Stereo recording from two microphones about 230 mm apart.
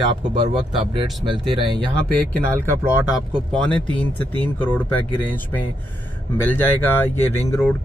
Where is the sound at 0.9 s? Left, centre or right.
Right.